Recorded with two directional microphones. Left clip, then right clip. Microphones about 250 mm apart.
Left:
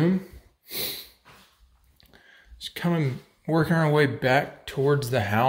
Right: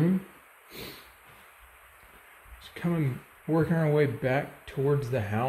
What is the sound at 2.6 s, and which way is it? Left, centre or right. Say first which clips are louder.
Speech: left 5 dB; centre.